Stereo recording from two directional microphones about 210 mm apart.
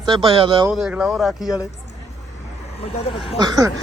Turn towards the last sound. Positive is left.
turn(degrees=-15)  # may be behind; listen again after turning